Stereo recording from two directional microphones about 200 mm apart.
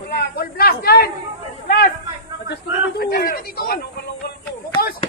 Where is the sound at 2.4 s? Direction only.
55° left (ahead or behind).